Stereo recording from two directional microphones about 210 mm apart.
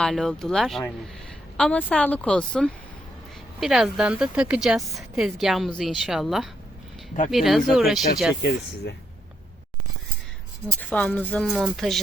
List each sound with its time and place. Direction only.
0.0 s a woman's voice: centre (ahead or behind)
8.4 s speech: 55° left (ahead or behind)
10.8 s a woman's voice: 5° left (ahead or behind)